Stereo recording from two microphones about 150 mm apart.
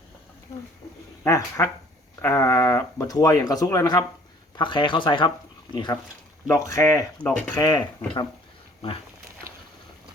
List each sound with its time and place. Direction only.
1.2 s speech: 20° left (ahead or behind)
7.2 s speech: 10° left (ahead or behind)
7.5 s speech: 30° left (ahead or behind)